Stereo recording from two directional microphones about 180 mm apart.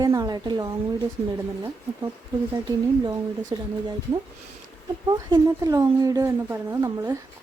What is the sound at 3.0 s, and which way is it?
Speech, 20° right (ahead or behind).